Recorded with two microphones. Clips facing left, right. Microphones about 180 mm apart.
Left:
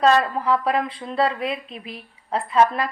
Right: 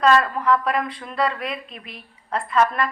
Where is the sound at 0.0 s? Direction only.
30° left (ahead or behind).